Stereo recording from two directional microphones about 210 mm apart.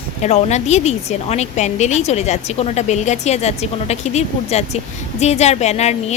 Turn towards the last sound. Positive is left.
turn(degrees=30)  # may be behind; listen again after turning